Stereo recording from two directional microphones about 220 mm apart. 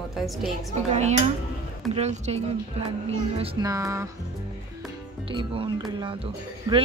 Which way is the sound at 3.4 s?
20° right (ahead or behind).